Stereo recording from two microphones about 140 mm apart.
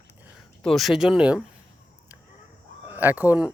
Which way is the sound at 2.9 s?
15° right (ahead or behind).